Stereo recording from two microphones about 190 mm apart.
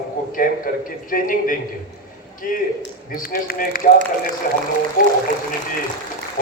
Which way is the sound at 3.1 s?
50° left (ahead or behind).